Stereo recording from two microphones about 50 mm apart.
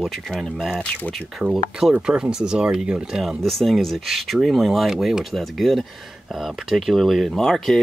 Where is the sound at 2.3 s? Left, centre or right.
Centre.